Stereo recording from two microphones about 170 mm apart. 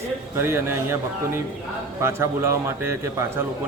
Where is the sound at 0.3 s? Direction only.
15° right (ahead or behind).